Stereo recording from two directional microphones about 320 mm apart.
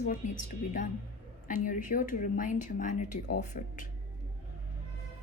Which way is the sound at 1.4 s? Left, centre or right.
Left.